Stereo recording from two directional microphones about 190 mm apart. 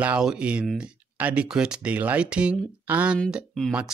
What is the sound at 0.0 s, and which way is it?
Speech, 5° right (ahead or behind).